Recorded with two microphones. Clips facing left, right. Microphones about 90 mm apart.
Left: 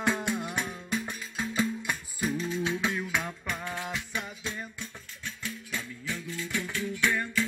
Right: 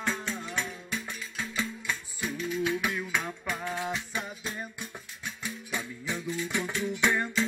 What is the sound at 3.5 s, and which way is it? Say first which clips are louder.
Music: right 5 dB; 15° right (ahead or behind).